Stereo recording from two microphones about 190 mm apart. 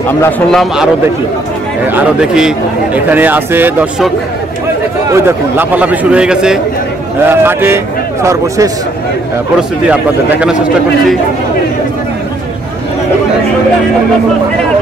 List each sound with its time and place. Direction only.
0.5 s a man's voice: centre (ahead or behind)
1.9 s speech: 5° right (ahead or behind)
5.1 s a man's voice: 10° right (ahead or behind)
9.8 s a man's voice: 5° right (ahead or behind)